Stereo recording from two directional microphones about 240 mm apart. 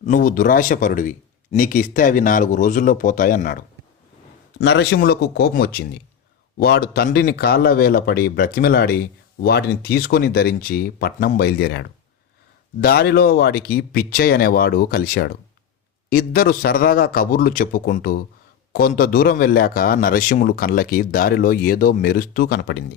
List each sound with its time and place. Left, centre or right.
0.0 s speech: left
4.6 s speech: left